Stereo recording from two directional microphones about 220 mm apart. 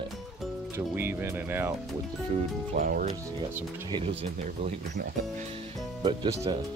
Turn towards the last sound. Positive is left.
turn(degrees=-20)  # may be behind; listen again after turning